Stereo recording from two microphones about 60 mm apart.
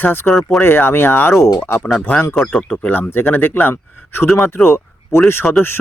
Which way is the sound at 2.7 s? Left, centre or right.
Left.